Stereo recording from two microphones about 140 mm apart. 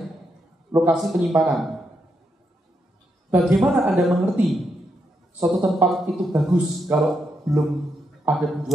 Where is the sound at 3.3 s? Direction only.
10° right (ahead or behind).